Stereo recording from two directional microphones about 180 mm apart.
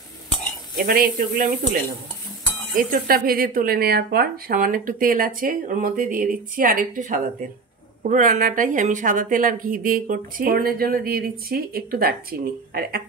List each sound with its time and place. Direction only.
0.7 s speech: 55° right (ahead or behind)